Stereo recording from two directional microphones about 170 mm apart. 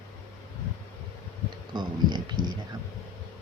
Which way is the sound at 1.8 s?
25° right (ahead or behind).